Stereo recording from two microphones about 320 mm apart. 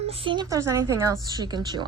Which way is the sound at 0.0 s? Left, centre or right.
Centre.